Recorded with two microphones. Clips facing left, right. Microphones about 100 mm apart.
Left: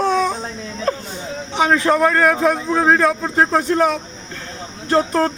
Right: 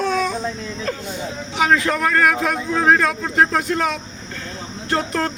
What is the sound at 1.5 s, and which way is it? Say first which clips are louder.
Speech: left 2 dB; 30° left (ahead or behind).